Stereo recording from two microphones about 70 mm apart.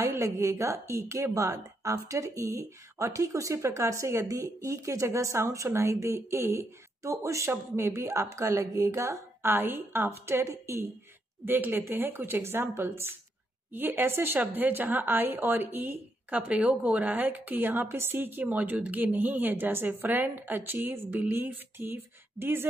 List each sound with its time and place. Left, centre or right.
0.0 s a woman's voice: right
11.4 s a woman's voice: right